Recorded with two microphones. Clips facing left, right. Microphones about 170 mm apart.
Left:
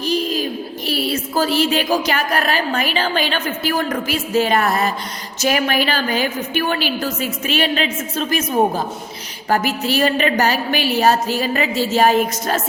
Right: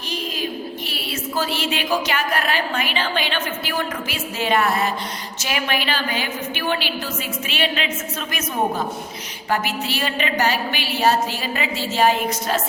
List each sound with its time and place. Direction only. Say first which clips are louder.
0.9 s a woman's voice: left 7 dB; 40° left (ahead or behind)